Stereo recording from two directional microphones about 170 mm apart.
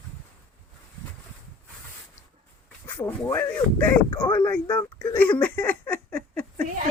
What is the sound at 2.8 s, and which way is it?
Speech, 10° left (ahead or behind).